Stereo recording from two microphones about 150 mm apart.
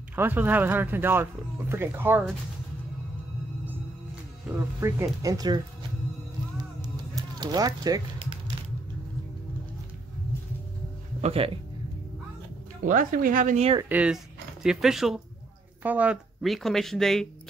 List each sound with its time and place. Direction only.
0.1 s speech: 15° right (ahead or behind)
3.6 s music: 10° right (ahead or behind)
7.3 s speech: 25° right (ahead or behind)
11.1 s speech: 40° right (ahead or behind)
12.8 s speech: 65° right (ahead or behind)
13.8 s speech: 5° right (ahead or behind)